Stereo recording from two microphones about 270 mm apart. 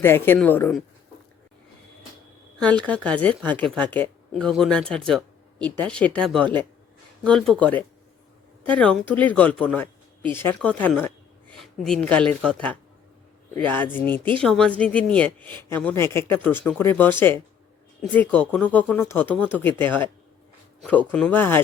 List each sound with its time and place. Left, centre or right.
0.0 s speech: centre
2.8 s speech: centre
21.1 s speech: centre